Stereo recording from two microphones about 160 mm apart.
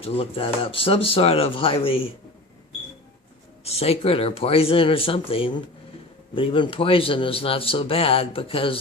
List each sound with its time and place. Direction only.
0.0 s speech: 35° left (ahead or behind)
3.6 s speech: 40° left (ahead or behind)